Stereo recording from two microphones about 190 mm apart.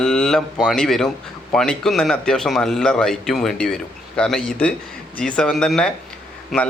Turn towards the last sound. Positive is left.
turn(degrees=0)  # may be behind; listen again after turning